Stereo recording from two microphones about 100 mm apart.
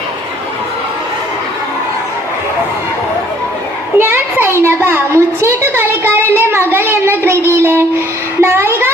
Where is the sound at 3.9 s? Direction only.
20° right (ahead or behind).